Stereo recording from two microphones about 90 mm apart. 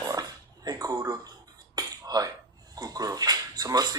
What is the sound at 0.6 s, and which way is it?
Speech, 40° right (ahead or behind).